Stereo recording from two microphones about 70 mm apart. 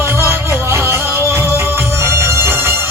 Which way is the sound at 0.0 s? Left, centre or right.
Right.